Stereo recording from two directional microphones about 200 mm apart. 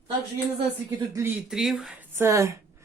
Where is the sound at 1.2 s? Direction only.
10° right (ahead or behind).